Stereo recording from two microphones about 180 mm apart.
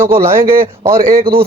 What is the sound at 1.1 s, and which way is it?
Speech, 55° right (ahead or behind).